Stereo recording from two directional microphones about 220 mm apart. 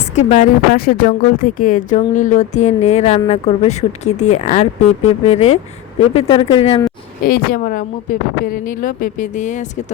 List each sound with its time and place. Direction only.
0.2 s speech: 30° left (ahead or behind)
7.3 s speech: 40° left (ahead or behind)